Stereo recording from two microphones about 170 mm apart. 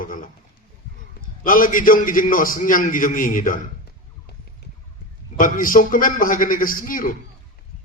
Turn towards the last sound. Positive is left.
turn(degrees=55)  # may be behind; listen again after turning